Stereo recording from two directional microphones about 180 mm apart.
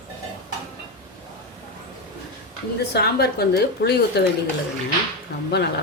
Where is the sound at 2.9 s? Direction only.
65° left (ahead or behind).